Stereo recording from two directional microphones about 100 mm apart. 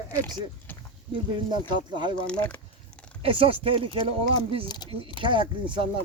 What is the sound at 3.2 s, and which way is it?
Speech, 65° right (ahead or behind).